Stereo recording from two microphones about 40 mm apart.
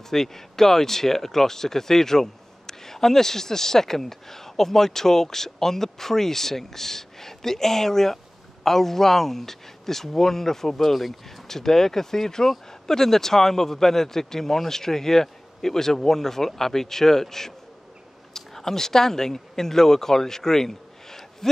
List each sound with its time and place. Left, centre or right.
0.1 s speech: centre